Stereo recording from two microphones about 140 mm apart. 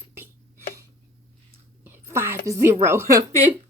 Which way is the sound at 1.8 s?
15° right (ahead or behind).